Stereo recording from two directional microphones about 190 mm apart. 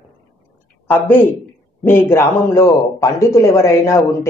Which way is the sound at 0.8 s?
10° left (ahead or behind).